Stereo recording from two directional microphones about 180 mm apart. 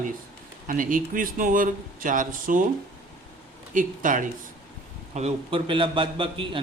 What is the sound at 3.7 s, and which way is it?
Speech, 45° right (ahead or behind).